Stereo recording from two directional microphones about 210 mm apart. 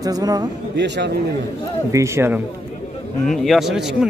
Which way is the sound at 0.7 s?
55° right (ahead or behind).